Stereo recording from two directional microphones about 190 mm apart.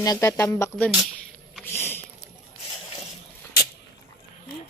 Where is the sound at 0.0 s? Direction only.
20° left (ahead or behind).